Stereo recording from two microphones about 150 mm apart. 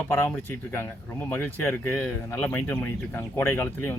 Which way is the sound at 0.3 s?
15° left (ahead or behind).